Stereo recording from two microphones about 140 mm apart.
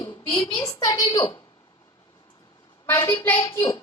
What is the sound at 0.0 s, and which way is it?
A child's voice, 35° left (ahead or behind).